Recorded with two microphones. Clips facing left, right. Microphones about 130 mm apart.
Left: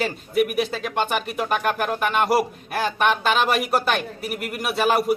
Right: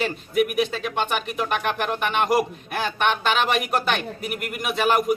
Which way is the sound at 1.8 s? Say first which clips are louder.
Left 2 dB; 5° left (ahead or behind).